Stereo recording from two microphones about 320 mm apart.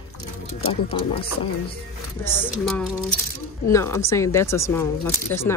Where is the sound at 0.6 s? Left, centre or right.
Centre.